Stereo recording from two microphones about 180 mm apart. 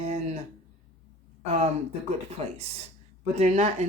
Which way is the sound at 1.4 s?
35° right (ahead or behind).